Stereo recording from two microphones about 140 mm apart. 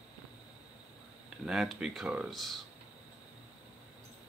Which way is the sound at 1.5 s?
5° right (ahead or behind).